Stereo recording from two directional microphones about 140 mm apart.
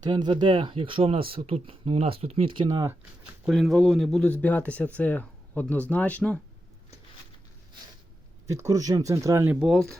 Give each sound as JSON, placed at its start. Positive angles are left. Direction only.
{"t": 0.0, "sound": "speech", "side_deg": -30}
{"t": 3.4, "sound": "speech", "side_deg": 0}
{"t": 8.4, "sound": "speech", "side_deg": -20}
{"t": 9.5, "sound": "speech", "side_deg": -5}